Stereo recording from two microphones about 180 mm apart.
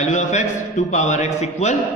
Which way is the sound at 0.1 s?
40° left (ahead or behind).